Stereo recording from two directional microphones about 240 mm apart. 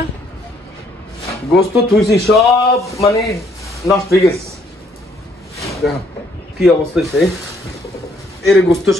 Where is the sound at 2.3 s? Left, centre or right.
Centre.